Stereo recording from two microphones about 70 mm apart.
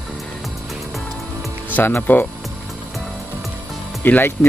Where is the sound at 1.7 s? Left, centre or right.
Left.